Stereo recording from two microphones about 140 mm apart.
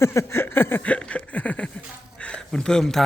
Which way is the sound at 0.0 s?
20° left (ahead or behind).